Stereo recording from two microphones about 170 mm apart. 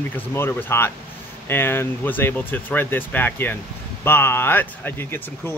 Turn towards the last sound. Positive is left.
turn(degrees=10)  # may be behind; listen again after turning